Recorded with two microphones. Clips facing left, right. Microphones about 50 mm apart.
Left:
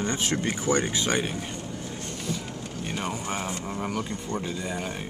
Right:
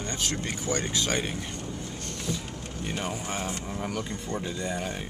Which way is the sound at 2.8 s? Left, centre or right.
Centre.